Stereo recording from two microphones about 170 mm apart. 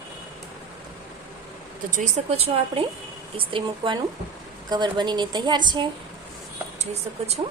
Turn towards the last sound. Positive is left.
turn(degrees=-40)  # may be behind; listen again after turning